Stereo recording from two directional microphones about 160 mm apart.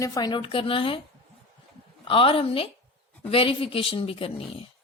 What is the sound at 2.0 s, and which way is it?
Speech, 35° left (ahead or behind).